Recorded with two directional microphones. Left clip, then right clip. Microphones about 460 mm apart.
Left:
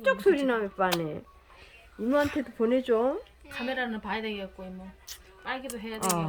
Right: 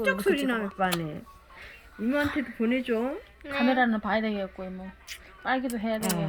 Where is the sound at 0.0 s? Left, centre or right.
Centre.